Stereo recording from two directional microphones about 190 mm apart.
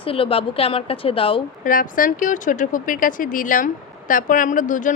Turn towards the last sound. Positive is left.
turn(degrees=45)  # may be behind; listen again after turning